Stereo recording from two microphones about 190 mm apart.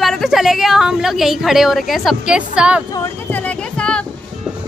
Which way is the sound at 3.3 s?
10° left (ahead or behind).